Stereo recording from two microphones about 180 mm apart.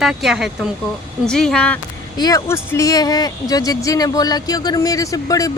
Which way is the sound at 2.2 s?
20° left (ahead or behind).